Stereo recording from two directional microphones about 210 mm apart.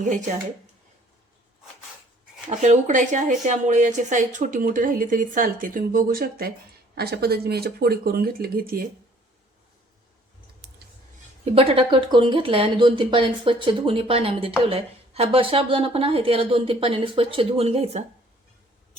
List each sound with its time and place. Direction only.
2.5 s a woman's voice: 35° right (ahead or behind)
11.5 s speech: 25° right (ahead or behind)